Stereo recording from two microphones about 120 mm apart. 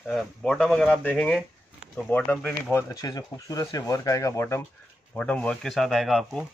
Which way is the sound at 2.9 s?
35° left (ahead or behind).